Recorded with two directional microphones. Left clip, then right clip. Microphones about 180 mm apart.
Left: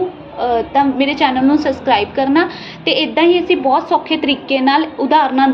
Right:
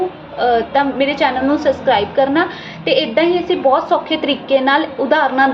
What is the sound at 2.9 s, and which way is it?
A woman's voice, 25° left (ahead or behind).